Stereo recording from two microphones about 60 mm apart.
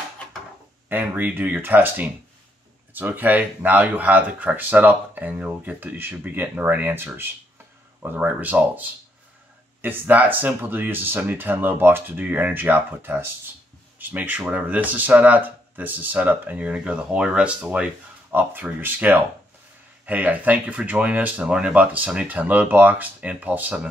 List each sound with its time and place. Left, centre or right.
0.8 s speech: right
18.3 s speech: right